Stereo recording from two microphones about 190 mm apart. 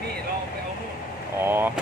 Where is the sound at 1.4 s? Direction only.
10° right (ahead or behind).